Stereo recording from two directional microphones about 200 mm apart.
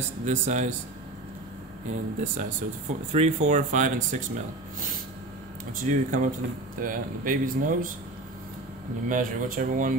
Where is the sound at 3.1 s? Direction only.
35° right (ahead or behind).